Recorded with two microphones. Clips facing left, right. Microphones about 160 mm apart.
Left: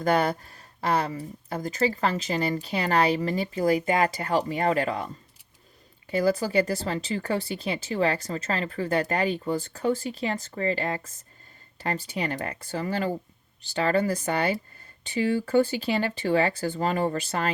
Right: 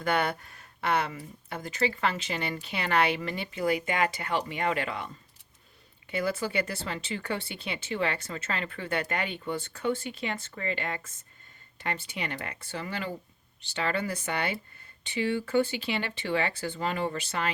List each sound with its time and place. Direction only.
0.0 s speech: 35° left (ahead or behind)
6.1 s speech: 35° left (ahead or behind)